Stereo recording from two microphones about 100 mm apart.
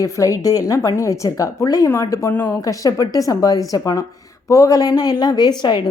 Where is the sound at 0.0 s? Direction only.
35° left (ahead or behind).